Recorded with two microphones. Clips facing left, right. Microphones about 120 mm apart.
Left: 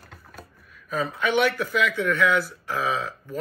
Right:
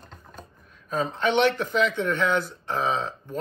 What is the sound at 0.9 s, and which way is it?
Speech, 30° right (ahead or behind).